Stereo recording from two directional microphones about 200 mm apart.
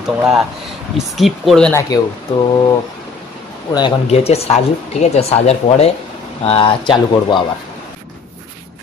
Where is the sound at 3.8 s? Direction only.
25° left (ahead or behind).